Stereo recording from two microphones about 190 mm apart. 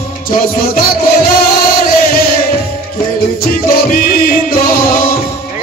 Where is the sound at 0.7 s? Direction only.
50° left (ahead or behind).